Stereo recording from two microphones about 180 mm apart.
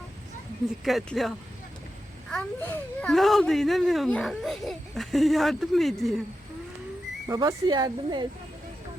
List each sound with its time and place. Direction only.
0.9 s a child's voice: centre (ahead or behind)
2.3 s a child's voice: 10° left (ahead or behind)
7.3 s speech: 20° right (ahead or behind)